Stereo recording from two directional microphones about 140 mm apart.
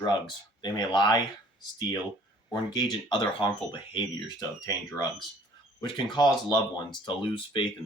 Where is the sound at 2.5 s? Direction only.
30° left (ahead or behind).